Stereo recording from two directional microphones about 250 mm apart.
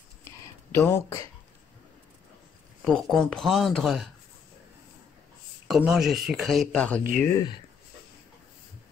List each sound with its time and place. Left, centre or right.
0.7 s speech: centre
2.8 s speech: centre
5.7 s speech: centre
7.0 s speech: right